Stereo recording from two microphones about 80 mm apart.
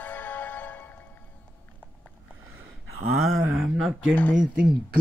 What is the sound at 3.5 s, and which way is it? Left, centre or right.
Speech, centre.